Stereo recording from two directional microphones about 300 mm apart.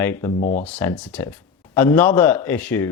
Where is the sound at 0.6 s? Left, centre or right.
Centre.